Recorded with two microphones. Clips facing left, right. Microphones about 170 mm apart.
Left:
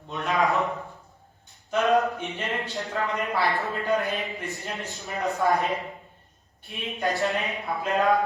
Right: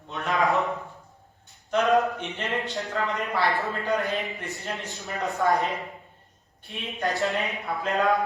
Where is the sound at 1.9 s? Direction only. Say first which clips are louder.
Left 1 dB; centre (ahead or behind).